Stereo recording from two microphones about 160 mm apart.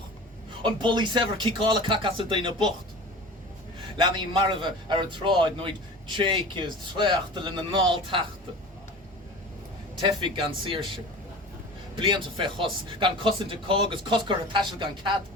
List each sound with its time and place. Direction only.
0.9 s speech: 30° right (ahead or behind)
3.9 s speech: 30° right (ahead or behind)
10.0 s speech: 30° right (ahead or behind)
11.9 s speech: 30° right (ahead or behind)